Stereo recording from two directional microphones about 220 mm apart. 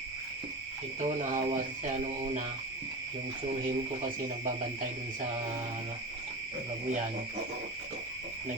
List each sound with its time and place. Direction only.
1.0 s speech: 35° right (ahead or behind)